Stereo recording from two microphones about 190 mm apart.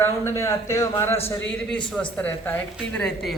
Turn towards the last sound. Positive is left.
turn(degrees=5)  # may be behind; listen again after turning